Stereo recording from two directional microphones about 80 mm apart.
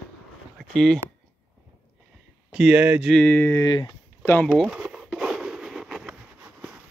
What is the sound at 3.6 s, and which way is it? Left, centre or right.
Speech, left.